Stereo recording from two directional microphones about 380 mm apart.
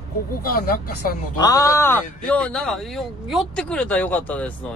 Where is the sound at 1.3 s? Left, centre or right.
Centre.